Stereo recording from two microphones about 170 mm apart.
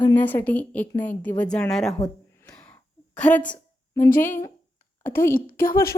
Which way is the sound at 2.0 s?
5° left (ahead or behind).